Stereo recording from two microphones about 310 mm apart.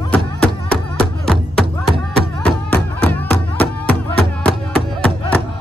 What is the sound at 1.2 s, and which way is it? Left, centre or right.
Music, centre.